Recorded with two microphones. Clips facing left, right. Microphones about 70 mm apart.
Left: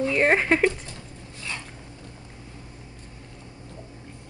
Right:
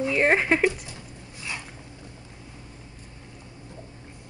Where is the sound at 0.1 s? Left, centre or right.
Centre.